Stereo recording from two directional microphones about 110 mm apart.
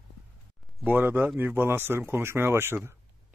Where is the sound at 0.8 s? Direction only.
15° right (ahead or behind).